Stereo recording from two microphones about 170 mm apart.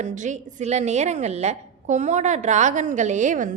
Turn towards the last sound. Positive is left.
turn(degrees=-50)  # may be behind; listen again after turning